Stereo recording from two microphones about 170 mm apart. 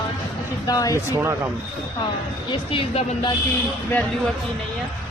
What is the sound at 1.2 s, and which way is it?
Speech, 15° right (ahead or behind).